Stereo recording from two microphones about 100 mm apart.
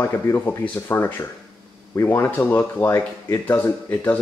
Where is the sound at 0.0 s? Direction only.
25° left (ahead or behind).